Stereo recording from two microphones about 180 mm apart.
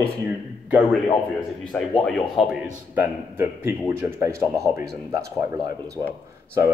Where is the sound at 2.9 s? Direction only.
10° right (ahead or behind).